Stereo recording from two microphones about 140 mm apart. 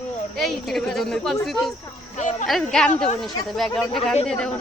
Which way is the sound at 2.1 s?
60° left (ahead or behind).